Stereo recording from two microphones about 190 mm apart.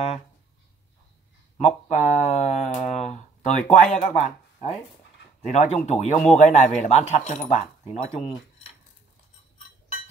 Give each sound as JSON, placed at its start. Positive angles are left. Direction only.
{"t": 1.9, "sound": "a man's voice", "side_deg": 35}